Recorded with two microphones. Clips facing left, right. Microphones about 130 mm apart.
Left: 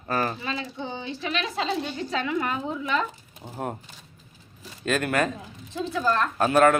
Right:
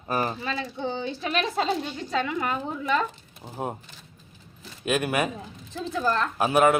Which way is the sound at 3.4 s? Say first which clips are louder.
Even; 15° right (ahead or behind).